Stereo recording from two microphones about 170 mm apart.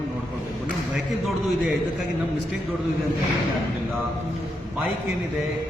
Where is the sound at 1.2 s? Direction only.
Centre (ahead or behind).